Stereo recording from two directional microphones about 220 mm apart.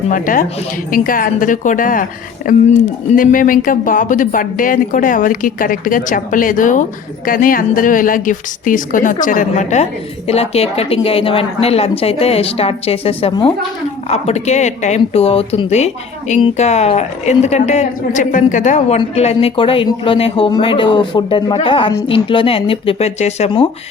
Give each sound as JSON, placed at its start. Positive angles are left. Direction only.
{"t": 0.1, "sound": "speech", "side_deg": 40}